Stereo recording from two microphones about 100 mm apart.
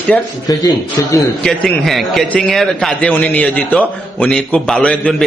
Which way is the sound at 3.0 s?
15° left (ahead or behind).